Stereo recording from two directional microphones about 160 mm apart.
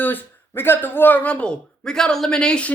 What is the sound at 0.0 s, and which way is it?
Speech, 10° left (ahead or behind).